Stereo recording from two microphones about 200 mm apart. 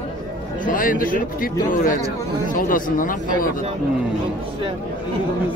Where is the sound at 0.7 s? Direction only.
45° left (ahead or behind).